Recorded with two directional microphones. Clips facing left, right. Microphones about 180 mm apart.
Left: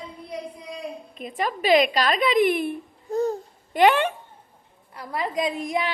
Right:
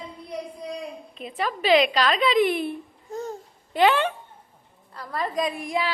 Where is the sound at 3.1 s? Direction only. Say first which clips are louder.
Left 8 dB; 35° left (ahead or behind).